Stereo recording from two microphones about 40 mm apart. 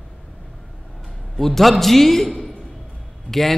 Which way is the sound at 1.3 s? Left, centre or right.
Centre.